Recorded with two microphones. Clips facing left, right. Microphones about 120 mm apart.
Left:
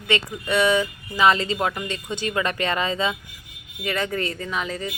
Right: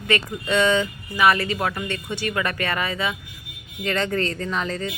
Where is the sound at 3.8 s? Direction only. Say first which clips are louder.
Right 2 dB; 10° left (ahead or behind).